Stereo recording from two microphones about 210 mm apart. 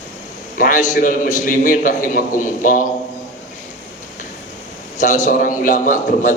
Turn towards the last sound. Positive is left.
turn(degrees=35)  # may be behind; listen again after turning